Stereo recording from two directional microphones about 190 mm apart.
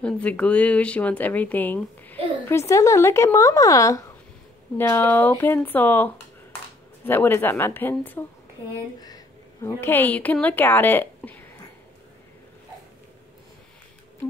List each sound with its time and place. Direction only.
0.0 s a woman's voice: 5° left (ahead or behind)